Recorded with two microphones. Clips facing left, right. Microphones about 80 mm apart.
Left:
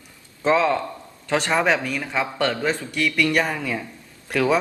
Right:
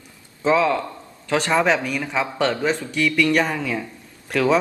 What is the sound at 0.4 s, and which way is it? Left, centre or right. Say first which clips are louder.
Speech: right 1 dB; centre.